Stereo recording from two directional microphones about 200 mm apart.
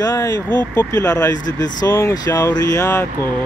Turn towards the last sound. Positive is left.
turn(degrees=15)  # may be behind; listen again after turning